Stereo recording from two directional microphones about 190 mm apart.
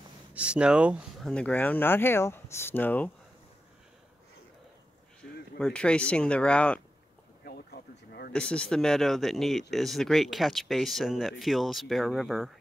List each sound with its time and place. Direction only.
0.3 s speech: 5° right (ahead or behind)
1.3 s speech: 5° left (ahead or behind)
5.6 s speech: 5° left (ahead or behind)
7.4 s a sound: 55° left (ahead or behind)
8.3 s speech: 5° left (ahead or behind)